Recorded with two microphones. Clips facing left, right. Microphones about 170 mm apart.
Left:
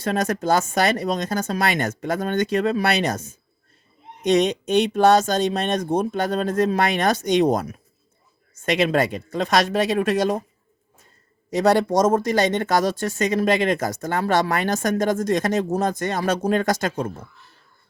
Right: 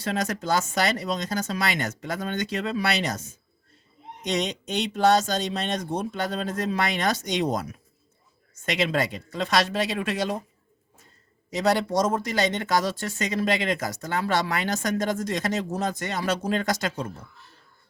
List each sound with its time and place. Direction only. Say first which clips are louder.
0.0 s speech: left 5 dB; 50° left (ahead or behind)
11.5 s speech: left 5 dB; 50° left (ahead or behind)